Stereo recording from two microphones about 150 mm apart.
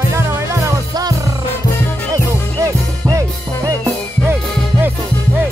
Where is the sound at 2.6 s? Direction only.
20° right (ahead or behind).